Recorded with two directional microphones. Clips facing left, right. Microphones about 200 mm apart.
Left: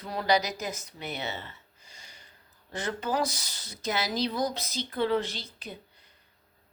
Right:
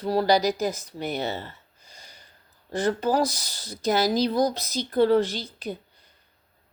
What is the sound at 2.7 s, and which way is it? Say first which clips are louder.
A woman's voice: right 7 dB; 35° right (ahead or behind).